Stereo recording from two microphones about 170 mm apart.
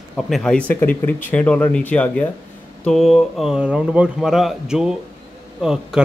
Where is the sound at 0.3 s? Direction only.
5° left (ahead or behind).